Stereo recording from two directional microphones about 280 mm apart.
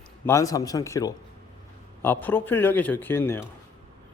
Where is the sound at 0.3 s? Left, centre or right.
Centre.